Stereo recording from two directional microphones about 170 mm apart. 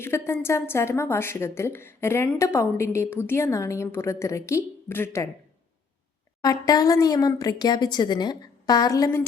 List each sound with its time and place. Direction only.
0.0 s a woman's voice: 15° left (ahead or behind)
6.4 s speech: 20° left (ahead or behind)